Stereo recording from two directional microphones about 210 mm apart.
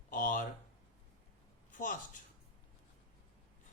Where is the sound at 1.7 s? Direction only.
40° left (ahead or behind).